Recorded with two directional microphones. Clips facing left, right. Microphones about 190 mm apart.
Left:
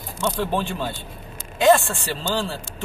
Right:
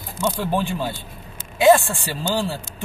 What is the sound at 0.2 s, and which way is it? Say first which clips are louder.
A man's voice: right 1 dB; 10° right (ahead or behind).